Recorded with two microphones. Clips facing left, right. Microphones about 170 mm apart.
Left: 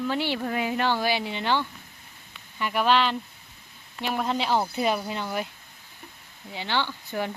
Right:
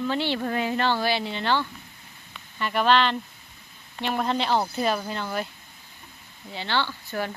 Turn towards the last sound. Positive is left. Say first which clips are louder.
# even
turn(degrees=15)  # may be behind; listen again after turning